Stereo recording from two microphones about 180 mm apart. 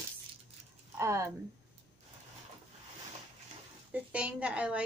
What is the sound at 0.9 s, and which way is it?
Speech, 15° right (ahead or behind).